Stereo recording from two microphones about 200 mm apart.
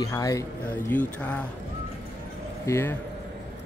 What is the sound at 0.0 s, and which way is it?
Speech, 15° left (ahead or behind).